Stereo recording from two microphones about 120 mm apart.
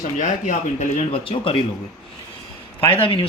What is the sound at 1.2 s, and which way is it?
Speech, 50° left (ahead or behind).